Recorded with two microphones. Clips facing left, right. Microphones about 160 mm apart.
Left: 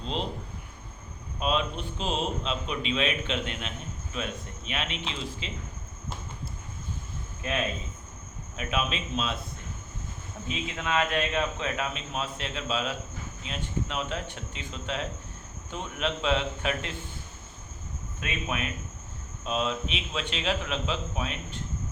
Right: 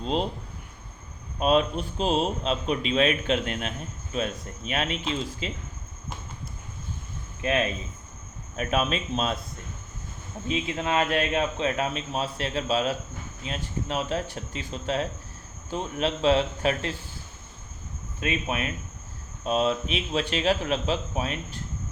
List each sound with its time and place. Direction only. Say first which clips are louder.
1.4 s a man's voice: right 6 dB; 40° right (ahead or behind)
8.5 s a man's voice: right 5 dB; 45° right (ahead or behind)
10.4 s a man's voice: right 6 dB; 30° right (ahead or behind)
18.2 s a man's voice: right 4 dB; 35° right (ahead or behind)